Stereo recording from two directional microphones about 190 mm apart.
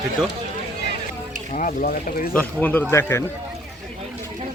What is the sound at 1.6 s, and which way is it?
Speech, 45° left (ahead or behind).